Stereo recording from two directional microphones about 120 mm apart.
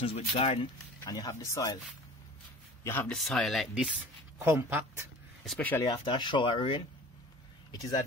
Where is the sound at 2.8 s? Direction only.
20° left (ahead or behind).